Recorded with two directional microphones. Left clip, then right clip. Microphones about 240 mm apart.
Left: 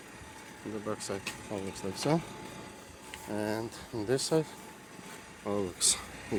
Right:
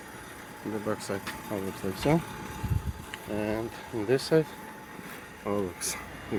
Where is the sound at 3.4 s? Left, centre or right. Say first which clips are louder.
Right 3 dB; centre.